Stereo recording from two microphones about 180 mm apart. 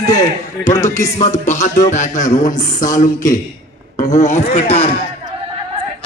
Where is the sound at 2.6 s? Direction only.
45° left (ahead or behind).